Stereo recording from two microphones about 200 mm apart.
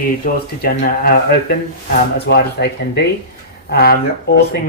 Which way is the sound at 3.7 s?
50° left (ahead or behind).